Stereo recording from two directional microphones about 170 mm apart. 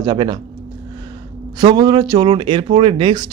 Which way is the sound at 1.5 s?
25° right (ahead or behind).